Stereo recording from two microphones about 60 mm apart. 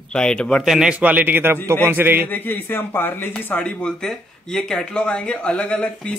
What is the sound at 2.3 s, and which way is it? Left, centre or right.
Speech, left.